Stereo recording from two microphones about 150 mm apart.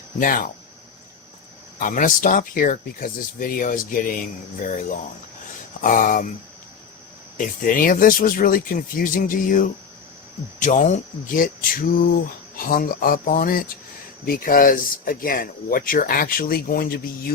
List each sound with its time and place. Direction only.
0.2 s speech: 65° left (ahead or behind)
1.8 s speech: 65° left (ahead or behind)
7.3 s speech: 65° left (ahead or behind)
10.6 s speech: 55° left (ahead or behind); by 17.3 s 85° left